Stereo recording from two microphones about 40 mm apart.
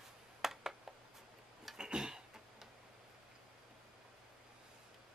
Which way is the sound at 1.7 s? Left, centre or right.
Centre.